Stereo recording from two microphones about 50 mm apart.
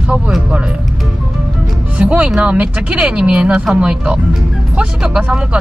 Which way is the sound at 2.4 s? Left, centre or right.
Right.